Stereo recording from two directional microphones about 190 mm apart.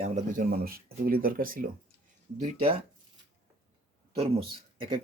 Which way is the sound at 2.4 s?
30° right (ahead or behind).